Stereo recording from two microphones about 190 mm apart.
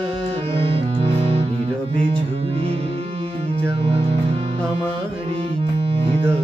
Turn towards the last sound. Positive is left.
turn(degrees=-30)  # may be behind; listen again after turning